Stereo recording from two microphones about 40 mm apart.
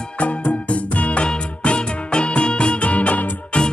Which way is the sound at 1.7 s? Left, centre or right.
Left.